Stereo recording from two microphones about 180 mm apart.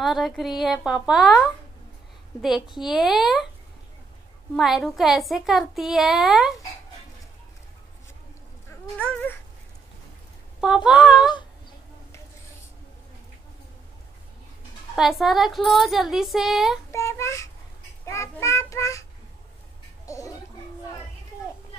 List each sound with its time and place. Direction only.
0.0 s a woman's voice: centre (ahead or behind)
2.7 s a woman's voice: centre (ahead or behind)
4.6 s a woman's voice: centre (ahead or behind)
8.6 s a sound: 5° left (ahead or behind)
10.6 s a woman's voice: 5° right (ahead or behind)
15.0 s a woman's voice: centre (ahead or behind)
16.9 s a child's voice: 15° left (ahead or behind)
20.1 s gargling: 20° left (ahead or behind)